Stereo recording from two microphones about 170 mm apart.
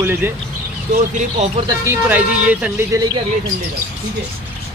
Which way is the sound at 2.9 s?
20° right (ahead or behind).